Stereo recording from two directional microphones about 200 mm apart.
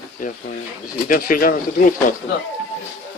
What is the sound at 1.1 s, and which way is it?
Speech, 45° left (ahead or behind).